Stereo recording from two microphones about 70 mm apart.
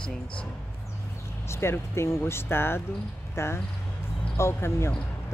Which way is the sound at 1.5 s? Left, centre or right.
Left.